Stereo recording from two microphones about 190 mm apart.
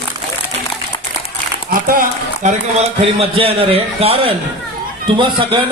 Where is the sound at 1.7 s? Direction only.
45° right (ahead or behind).